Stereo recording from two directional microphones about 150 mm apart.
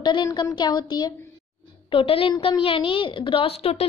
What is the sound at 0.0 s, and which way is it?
A woman's voice, 30° left (ahead or behind).